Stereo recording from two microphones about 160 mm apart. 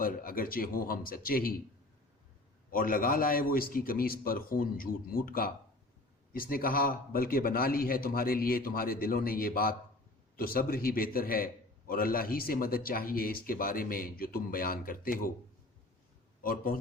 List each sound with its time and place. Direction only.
0.0 s speech: 65° left (ahead or behind)
2.6 s speech: 60° left (ahead or behind)
16.4 s speech: 65° left (ahead or behind)